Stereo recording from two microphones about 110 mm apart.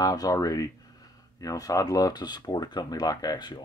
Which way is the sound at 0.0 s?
35° left (ahead or behind).